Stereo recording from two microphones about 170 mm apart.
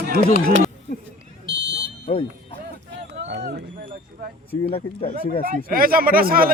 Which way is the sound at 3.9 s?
50° right (ahead or behind).